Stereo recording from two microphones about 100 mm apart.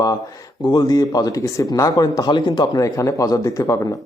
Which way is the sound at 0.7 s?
40° left (ahead or behind).